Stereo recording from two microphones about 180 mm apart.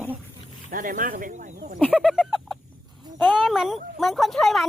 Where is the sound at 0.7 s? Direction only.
45° right (ahead or behind).